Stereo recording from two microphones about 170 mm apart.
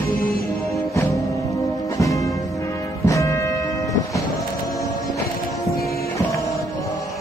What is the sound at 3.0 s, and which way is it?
Music, 20° left (ahead or behind).